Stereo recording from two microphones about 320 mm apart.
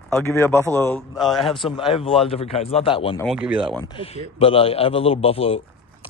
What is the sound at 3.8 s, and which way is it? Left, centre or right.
A man's voice, centre.